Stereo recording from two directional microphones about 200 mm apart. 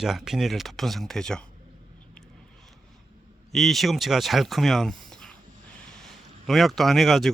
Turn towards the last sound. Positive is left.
turn(degrees=0)  # may be behind; listen again after turning